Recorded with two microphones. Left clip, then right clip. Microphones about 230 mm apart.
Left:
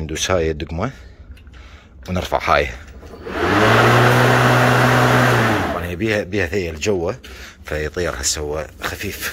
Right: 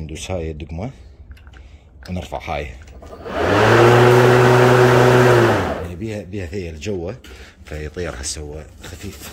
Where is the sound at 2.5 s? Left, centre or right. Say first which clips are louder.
Left 11 dB; centre.